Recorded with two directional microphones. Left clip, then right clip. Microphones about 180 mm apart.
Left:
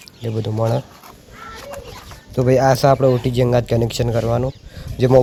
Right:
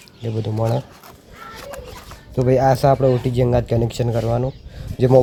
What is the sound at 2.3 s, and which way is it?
Speech, centre (ahead or behind).